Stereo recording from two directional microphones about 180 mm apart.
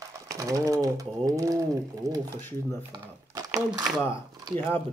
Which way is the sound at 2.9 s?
20° right (ahead or behind).